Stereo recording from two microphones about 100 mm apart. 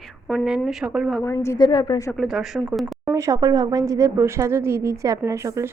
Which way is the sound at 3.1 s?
30° right (ahead or behind).